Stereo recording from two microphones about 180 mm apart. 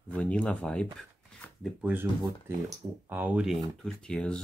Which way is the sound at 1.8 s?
10° right (ahead or behind).